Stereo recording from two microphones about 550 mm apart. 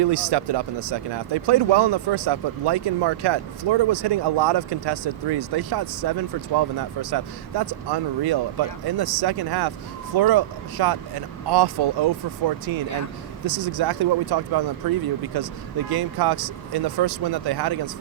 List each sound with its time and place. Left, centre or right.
0.0 s speech: right
13.4 s speech: right